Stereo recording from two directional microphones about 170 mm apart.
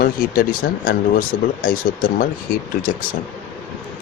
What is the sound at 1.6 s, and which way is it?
Speech, 55° left (ahead or behind).